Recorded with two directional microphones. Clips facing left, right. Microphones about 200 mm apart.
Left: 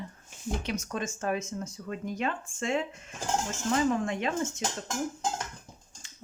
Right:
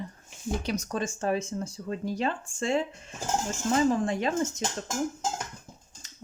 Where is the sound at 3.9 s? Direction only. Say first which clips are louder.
Right 2 dB; 35° right (ahead or behind).